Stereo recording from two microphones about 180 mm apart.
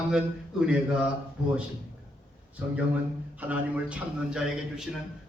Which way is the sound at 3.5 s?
5° right (ahead or behind).